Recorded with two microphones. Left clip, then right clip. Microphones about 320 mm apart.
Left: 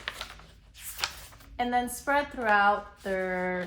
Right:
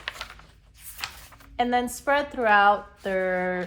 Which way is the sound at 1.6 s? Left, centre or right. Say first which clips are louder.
Right 4 dB; centre.